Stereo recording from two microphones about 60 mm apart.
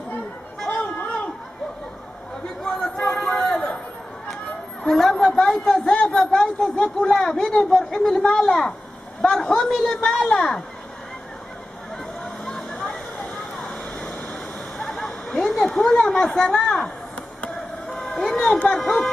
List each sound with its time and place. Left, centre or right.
0.7 s chatter: left
2.6 s a sound: centre
4.8 s a man's voice: centre
12.4 s vehicle: centre
14.9 s a sound: centre
17.4 s vehicle: centre
18.0 s vehicle: centre
18.7 s speech: centre